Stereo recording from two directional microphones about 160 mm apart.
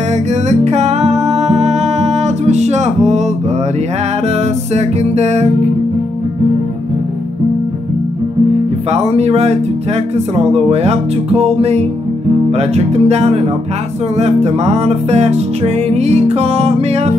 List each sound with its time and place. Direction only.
0.1 s music: 45° right (ahead or behind)
4.7 s music: 45° right (ahead or behind)
8.9 s speech: 40° right (ahead or behind)
14.1 s music: 40° right (ahead or behind)